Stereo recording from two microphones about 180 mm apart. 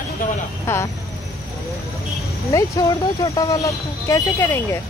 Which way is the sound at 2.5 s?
15° left (ahead or behind).